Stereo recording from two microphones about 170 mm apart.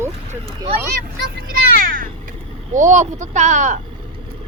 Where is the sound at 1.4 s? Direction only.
60° right (ahead or behind).